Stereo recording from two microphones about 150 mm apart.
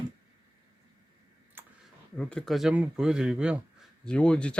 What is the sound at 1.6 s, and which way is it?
Clicking, 15° right (ahead or behind).